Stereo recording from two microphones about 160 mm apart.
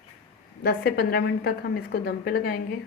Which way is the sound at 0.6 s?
75° left (ahead or behind).